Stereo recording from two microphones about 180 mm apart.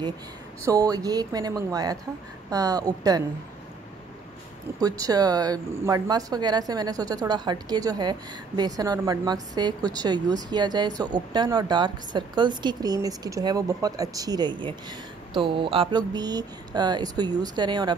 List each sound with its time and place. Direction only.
0.7 s speech: 20° right (ahead or behind)
4.7 s speech: 20° right (ahead or behind)